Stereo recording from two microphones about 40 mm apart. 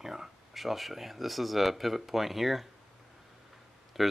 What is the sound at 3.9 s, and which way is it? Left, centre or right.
Speech, centre.